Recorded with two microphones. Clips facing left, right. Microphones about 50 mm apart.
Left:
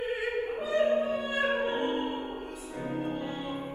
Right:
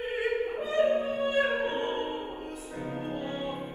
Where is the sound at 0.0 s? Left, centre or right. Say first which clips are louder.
Right 1 dB; right.